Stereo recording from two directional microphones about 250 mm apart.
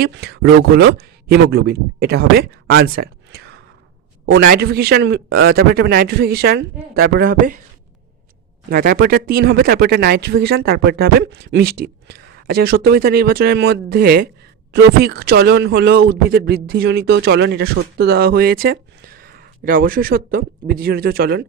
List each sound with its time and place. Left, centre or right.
0.0 s speech: right
8.7 s speech: right